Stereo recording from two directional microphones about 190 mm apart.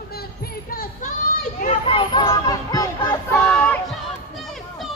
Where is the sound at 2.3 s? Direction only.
20° left (ahead or behind).